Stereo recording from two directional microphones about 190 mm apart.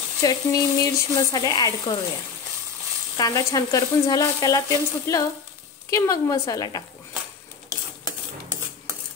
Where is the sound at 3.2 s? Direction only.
20° left (ahead or behind).